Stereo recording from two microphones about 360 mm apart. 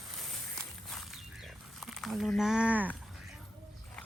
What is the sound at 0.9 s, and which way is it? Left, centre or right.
Wild animals, centre.